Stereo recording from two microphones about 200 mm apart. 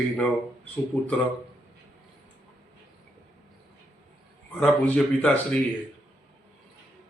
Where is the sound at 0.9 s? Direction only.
10° left (ahead or behind).